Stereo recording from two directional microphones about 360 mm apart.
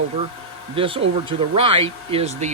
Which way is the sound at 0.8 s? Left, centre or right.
Centre.